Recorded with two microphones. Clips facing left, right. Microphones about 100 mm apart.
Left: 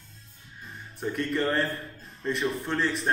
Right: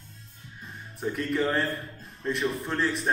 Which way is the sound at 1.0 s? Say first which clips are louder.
Even; centre (ahead or behind).